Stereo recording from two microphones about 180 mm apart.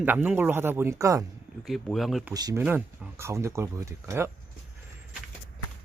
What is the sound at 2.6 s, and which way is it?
Speech, 10° right (ahead or behind).